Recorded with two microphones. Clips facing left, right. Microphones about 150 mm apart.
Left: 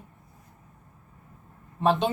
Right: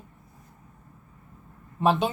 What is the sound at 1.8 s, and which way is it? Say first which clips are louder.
Speech: even; 5° right (ahead or behind).